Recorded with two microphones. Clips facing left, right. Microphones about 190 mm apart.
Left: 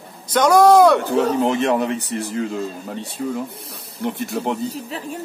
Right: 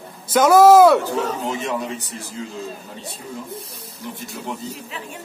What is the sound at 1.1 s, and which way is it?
A man's voice, 65° left (ahead or behind).